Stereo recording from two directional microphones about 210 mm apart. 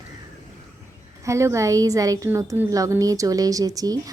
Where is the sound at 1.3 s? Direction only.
15° right (ahead or behind).